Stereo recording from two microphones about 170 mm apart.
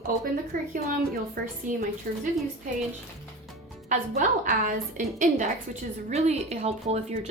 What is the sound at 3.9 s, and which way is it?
A woman's voice, 50° right (ahead or behind).